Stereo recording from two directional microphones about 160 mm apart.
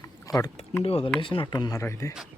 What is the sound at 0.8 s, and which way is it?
Speech, 35° left (ahead or behind).